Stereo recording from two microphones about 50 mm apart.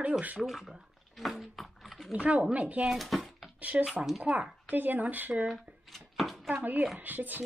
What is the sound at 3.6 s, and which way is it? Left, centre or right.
Speech, right.